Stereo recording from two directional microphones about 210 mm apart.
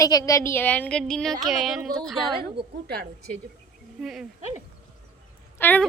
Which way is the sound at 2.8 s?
50° right (ahead or behind).